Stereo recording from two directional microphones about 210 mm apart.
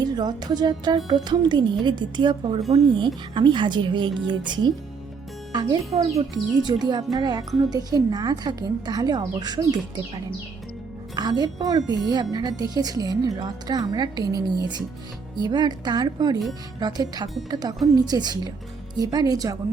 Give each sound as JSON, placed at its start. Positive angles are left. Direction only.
{"t": 0.0, "sound": "a woman's voice", "side_deg": -20}
{"t": 11.1, "sound": "a woman's voice", "side_deg": -20}